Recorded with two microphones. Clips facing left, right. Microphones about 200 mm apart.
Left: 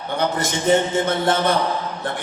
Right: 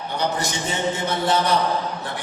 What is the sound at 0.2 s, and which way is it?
A man's voice, 50° left (ahead or behind).